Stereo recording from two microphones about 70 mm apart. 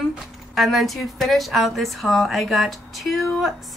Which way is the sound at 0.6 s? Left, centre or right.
Centre.